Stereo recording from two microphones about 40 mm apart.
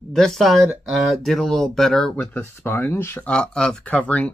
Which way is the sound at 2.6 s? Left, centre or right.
Left.